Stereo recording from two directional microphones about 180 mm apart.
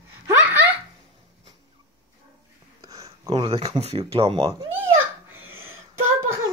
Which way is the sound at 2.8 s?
20° right (ahead or behind).